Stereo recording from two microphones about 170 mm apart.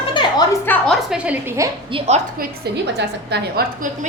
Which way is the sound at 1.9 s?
35° right (ahead or behind).